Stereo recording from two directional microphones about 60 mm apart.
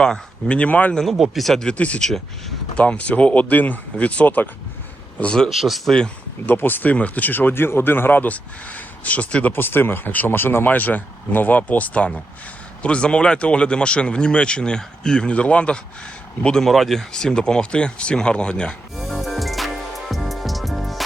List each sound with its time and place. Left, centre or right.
0.0 s speech: centre
1.0 s speech: centre
1.6 s speech: left
2.0 s speech: centre
2.7 s speech: centre
5.2 s speech: centre
5.5 s speech: centre
6.4 s speech: left; by 16.6 s centre
16.6 s speech: centre
18.9 s music: centre